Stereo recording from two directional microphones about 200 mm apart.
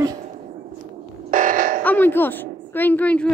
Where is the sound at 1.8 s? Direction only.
10° left (ahead or behind).